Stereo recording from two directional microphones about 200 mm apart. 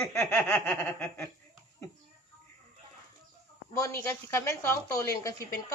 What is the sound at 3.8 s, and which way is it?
A woman's voice, 15° left (ahead or behind).